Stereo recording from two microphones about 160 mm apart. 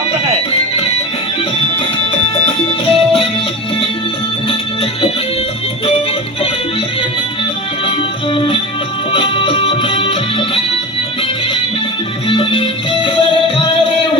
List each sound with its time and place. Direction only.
2.5 s music: 35° left (ahead or behind)
4.4 s music: 35° left (ahead or behind)
7.9 s music: 35° left (ahead or behind)
12.3 s music: 35° left (ahead or behind)